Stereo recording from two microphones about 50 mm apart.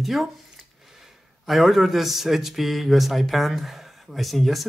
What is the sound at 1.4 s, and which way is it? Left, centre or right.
Speech, centre.